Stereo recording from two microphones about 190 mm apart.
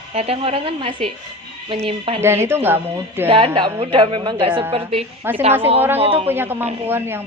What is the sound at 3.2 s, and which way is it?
A woman's voice, 30° right (ahead or behind).